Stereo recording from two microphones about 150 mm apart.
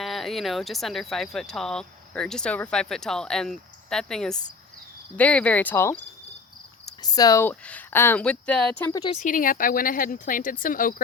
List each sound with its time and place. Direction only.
0.0 s speech: centre (ahead or behind)
6.8 s cricket: 25° left (ahead or behind)
7.4 s speech: 10° left (ahead or behind)
8.9 s speech: 25° left (ahead or behind)
9.2 s speech: 65° left (ahead or behind)